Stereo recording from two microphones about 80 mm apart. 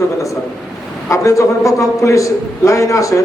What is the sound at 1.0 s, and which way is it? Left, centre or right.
A man's voice, left.